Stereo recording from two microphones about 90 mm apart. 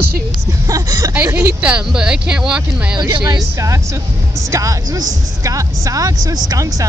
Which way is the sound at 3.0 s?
50° right (ahead or behind).